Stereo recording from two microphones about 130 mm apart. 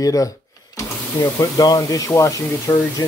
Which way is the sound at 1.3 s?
25° left (ahead or behind).